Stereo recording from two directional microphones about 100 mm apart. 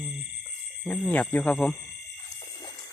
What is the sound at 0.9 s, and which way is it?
Speech, 15° left (ahead or behind).